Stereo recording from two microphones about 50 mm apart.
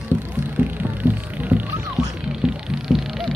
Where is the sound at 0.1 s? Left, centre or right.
Right.